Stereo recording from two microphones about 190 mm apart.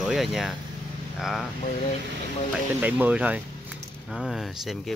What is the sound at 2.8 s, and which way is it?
Speech, 5° right (ahead or behind).